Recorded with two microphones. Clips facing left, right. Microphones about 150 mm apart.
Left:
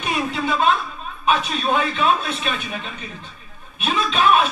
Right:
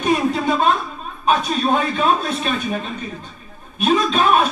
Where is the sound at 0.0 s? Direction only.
40° right (ahead or behind).